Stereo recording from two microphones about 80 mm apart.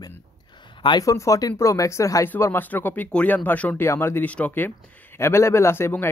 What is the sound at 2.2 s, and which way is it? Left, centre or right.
Speech, left.